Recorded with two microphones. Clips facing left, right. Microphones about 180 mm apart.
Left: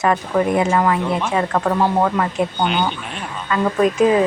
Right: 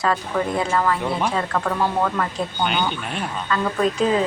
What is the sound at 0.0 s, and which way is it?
Speech, 20° left (ahead or behind).